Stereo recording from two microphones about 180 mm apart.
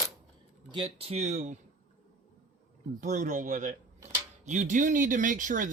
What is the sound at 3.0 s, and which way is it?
Speech, 45° right (ahead or behind).